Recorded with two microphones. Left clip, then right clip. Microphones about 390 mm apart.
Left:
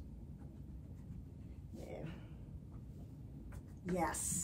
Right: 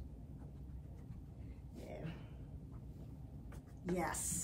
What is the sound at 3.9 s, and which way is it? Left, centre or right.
Speech, centre.